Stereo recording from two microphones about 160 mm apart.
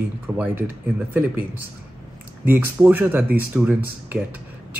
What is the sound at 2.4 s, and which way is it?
Speech, 15° right (ahead or behind).